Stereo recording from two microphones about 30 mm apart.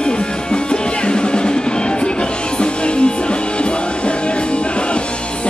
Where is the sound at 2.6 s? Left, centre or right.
Left.